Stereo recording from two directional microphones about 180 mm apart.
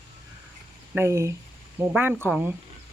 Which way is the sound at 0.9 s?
15° right (ahead or behind).